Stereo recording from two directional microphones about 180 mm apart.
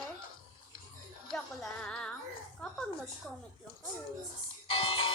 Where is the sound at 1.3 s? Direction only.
5° left (ahead or behind).